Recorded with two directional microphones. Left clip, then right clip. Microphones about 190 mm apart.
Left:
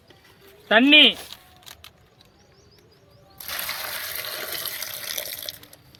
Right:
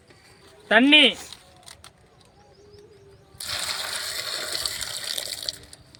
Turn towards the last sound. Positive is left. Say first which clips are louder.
# right 2 dB
turn(degrees=0)  # may be behind; listen again after turning